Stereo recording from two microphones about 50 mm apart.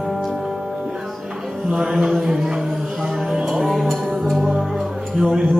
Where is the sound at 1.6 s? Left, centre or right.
Centre.